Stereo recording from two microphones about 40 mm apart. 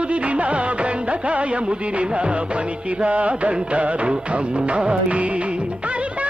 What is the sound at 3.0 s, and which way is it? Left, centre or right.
Music, right.